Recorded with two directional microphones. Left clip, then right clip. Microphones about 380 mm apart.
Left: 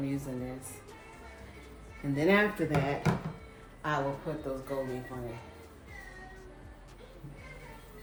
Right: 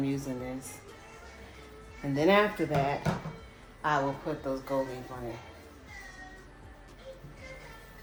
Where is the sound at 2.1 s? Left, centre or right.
Centre.